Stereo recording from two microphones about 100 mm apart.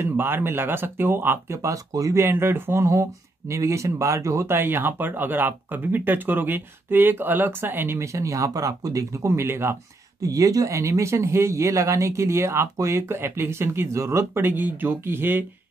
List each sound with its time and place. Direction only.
0.0 s speech: 20° right (ahead or behind)
10.2 s speech: 35° right (ahead or behind)